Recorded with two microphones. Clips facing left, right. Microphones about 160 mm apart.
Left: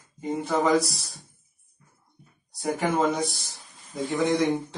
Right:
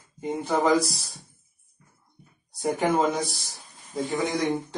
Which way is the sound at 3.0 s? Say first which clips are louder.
Even; centre (ahead or behind).